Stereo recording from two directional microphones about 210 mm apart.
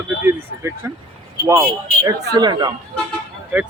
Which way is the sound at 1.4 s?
15° right (ahead or behind).